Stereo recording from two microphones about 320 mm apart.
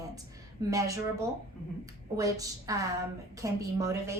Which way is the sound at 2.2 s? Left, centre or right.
Centre.